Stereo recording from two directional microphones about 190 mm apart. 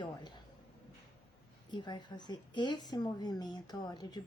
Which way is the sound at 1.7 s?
25° left (ahead or behind).